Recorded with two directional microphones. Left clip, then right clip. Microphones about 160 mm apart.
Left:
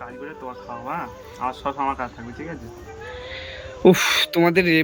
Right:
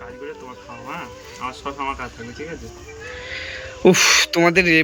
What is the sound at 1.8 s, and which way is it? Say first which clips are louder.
Speech: left 2 dB; 30° left (ahead or behind).